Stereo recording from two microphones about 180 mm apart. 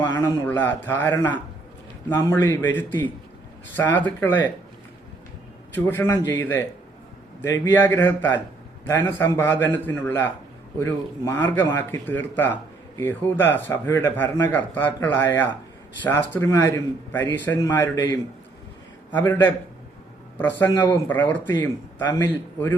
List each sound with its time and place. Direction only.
0.0 s a sound: 25° left (ahead or behind)
0.4 s speech: 10° left (ahead or behind)
5.7 s speech: 10° left (ahead or behind)